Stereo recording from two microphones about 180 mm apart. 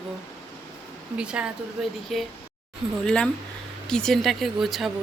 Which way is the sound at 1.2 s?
5° right (ahead or behind).